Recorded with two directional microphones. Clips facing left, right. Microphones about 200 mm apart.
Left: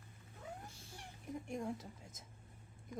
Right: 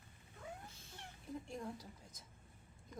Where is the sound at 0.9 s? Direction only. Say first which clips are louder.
Left 1 dB; 15° left (ahead or behind).